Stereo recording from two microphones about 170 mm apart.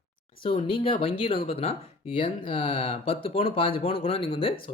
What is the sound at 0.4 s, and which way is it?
Speech, 30° left (ahead or behind).